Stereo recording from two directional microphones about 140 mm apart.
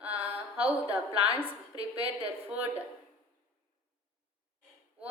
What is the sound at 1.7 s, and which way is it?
Speech, 30° left (ahead or behind).